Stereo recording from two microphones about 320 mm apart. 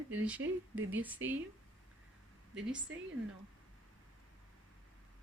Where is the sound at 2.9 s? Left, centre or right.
Right.